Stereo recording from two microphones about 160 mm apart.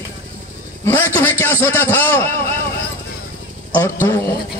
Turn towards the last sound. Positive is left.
turn(degrees=15)  # may be behind; listen again after turning